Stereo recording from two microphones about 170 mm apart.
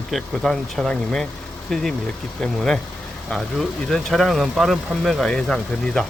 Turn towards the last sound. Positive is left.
turn(degrees=5)  # may be behind; listen again after turning